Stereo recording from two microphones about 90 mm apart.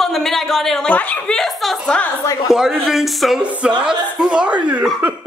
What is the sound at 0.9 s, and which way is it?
Speech, 15° left (ahead or behind).